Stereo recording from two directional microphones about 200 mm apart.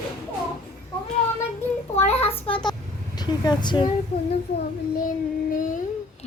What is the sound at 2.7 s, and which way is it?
Vehicle, 20° left (ahead or behind).